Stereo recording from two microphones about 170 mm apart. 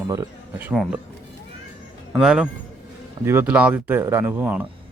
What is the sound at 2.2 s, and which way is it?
Speech, 5° right (ahead or behind).